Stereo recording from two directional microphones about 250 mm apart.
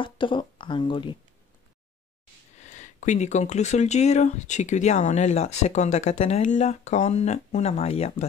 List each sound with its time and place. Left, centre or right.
0.0 s speech: centre
2.6 s speech: left